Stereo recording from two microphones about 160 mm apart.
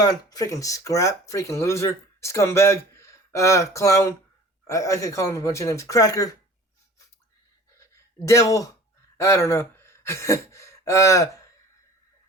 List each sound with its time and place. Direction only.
0.0 s speech: 25° left (ahead or behind)
8.2 s speech: 20° left (ahead or behind)